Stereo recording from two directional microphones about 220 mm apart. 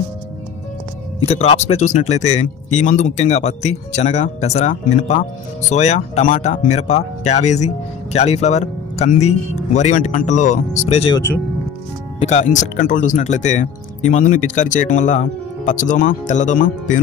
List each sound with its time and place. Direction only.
1.2 s speech: 30° left (ahead or behind)
12.2 s speech: 30° left (ahead or behind)